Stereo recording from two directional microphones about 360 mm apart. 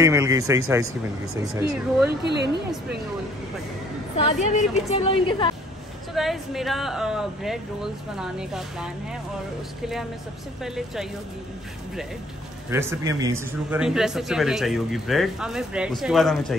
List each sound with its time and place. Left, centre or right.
0.0 s speech: centre
2.0 s speech: right
4.2 s a woman's voice: centre
6.1 s a man's voice: centre
12.6 s a man's voice: centre